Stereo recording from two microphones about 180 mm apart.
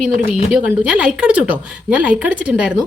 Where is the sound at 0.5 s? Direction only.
5° right (ahead or behind).